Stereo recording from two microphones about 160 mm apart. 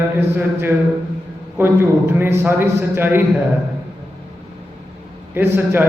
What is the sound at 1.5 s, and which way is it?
Mantra, 15° right (ahead or behind).